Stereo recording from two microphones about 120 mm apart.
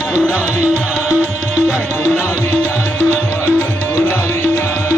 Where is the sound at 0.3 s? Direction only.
10° right (ahead or behind).